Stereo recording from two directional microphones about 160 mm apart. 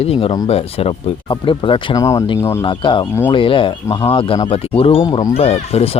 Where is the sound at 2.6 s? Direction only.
30° left (ahead or behind).